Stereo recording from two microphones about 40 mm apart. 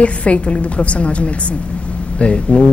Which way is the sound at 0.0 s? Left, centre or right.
Left.